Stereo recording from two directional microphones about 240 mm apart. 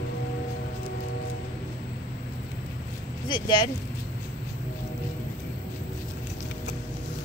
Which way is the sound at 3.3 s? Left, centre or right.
Centre.